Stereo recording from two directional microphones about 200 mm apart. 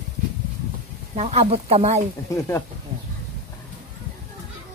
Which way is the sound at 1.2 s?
30° right (ahead or behind).